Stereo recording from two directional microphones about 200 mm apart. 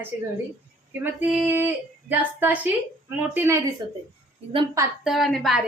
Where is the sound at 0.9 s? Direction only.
10° right (ahead or behind).